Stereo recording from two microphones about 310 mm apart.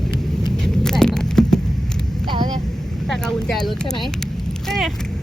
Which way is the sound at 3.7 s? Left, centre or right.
Centre.